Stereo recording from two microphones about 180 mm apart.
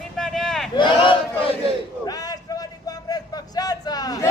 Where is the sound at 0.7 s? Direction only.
25° left (ahead or behind).